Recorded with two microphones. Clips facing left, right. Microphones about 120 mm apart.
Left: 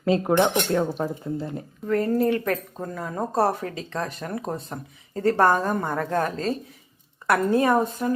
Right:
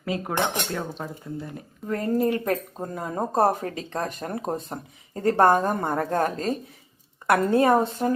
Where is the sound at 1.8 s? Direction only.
30° right (ahead or behind).